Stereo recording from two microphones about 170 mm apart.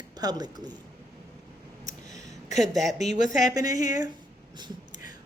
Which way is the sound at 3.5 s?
20° right (ahead or behind).